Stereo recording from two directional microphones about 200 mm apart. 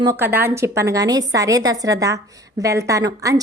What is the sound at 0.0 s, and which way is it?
Speech, 15° right (ahead or behind).